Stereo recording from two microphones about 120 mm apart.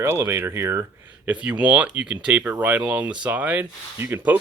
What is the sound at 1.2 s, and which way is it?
Speech, 10° right (ahead or behind).